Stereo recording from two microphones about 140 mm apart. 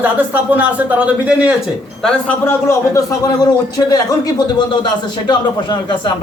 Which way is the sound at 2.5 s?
20° left (ahead or behind).